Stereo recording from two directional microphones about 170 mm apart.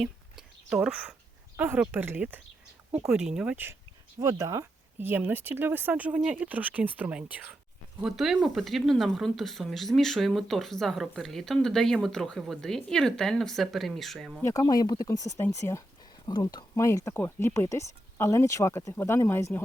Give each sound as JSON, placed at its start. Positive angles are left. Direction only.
{"t": 0.0, "sound": "a sound", "side_deg": -5}
{"t": 1.5, "sound": "speech", "side_deg": -10}
{"t": 4.2, "sound": "speech", "side_deg": -20}
{"t": 14.4, "sound": "speech", "side_deg": 20}